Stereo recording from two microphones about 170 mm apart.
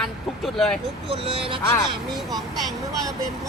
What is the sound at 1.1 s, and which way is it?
Speech, 35° right (ahead or behind).